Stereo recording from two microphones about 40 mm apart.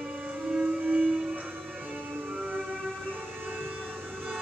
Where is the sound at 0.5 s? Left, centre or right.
Centre.